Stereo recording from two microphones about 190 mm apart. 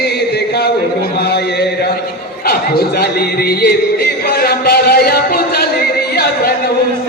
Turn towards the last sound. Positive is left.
turn(degrees=55)  # may be behind; listen again after turning